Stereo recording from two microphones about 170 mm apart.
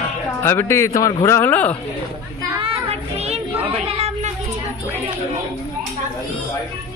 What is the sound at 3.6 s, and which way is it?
Chatter, 35° right (ahead or behind).